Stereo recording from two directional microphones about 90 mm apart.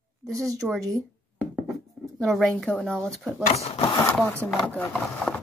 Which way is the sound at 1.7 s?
Centre (ahead or behind).